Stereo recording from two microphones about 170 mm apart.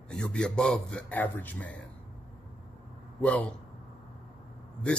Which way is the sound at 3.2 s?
5° left (ahead or behind).